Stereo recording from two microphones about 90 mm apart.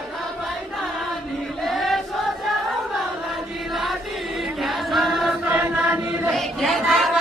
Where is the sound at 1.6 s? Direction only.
Centre (ahead or behind).